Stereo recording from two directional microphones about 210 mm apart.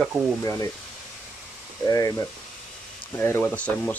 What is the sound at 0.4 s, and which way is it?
Speech, 15° left (ahead or behind).